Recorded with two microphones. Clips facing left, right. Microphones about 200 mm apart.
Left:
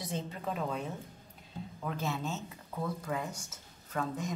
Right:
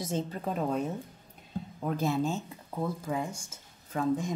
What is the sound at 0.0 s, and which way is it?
A woman's voice, 45° right (ahead or behind).